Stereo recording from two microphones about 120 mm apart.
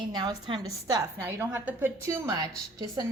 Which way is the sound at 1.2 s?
15° right (ahead or behind).